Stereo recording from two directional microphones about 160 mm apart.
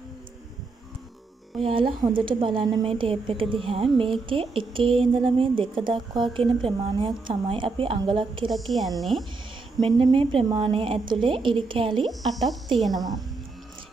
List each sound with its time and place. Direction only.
1.6 s a woman's voice: 35° right (ahead or behind)
8.5 s speech: centre (ahead or behind)
9.8 s a woman's voice: 35° right (ahead or behind)
12.1 s speech: centre (ahead or behind)